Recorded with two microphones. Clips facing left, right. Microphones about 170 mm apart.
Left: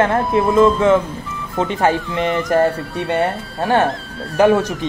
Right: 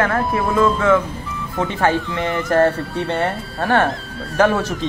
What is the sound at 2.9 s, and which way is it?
Speech, 20° left (ahead or behind).